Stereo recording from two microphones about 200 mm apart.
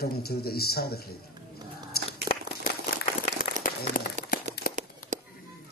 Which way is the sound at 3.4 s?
45° left (ahead or behind).